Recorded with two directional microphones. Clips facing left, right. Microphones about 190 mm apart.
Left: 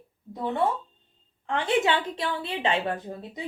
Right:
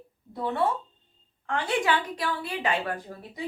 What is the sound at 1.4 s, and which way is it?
A woman's voice, 25° left (ahead or behind).